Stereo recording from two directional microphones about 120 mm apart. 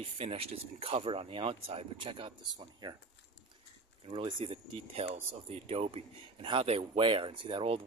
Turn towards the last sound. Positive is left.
turn(degrees=-45)  # may be behind; listen again after turning